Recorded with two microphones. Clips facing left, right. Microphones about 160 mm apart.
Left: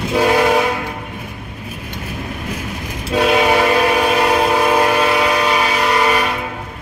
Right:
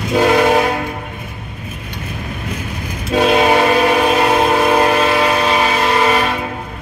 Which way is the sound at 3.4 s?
25° right (ahead or behind).